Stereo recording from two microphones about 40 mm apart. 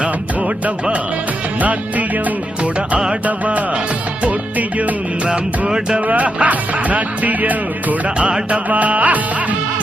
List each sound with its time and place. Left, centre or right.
0.0 s music: right
3.2 s music: right
5.3 s music: right
6.1 s music: right